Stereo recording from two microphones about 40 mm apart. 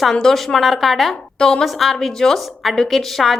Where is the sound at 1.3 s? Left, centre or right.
Centre.